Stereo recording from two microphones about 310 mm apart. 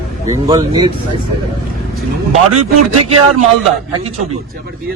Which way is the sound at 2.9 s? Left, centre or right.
Right.